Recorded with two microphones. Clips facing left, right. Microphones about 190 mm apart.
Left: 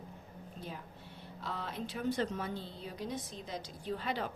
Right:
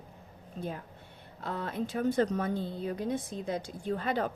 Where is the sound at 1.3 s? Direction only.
50° right (ahead or behind).